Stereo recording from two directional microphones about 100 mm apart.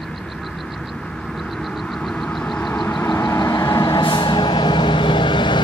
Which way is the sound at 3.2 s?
35° left (ahead or behind).